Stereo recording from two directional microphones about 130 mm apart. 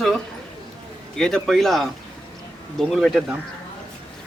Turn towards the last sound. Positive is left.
turn(degrees=-5)  # may be behind; listen again after turning